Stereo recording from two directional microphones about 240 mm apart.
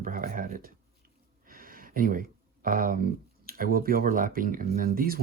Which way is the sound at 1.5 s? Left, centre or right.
Right.